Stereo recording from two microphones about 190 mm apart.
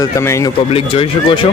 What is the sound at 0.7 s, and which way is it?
Speech, 30° left (ahead or behind).